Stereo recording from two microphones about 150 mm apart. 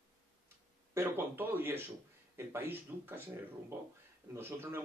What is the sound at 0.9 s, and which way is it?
Speech, 15° right (ahead or behind).